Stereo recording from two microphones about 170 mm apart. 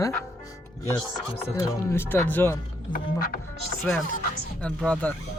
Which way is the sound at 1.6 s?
15° left (ahead or behind).